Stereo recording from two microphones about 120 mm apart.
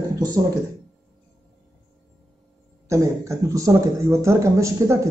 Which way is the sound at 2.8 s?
25° right (ahead or behind).